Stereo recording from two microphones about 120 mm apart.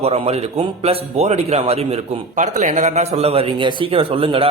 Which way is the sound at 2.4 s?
85° right.